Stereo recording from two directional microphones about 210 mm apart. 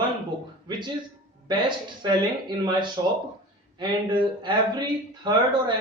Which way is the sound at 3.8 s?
20° right (ahead or behind).